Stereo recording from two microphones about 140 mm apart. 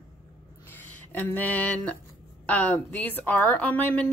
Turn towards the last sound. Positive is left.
turn(degrees=10)  # may be behind; listen again after turning